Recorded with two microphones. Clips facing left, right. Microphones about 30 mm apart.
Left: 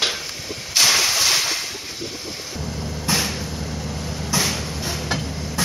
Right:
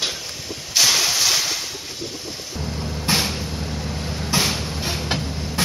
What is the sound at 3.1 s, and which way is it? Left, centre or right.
Vehicle, right.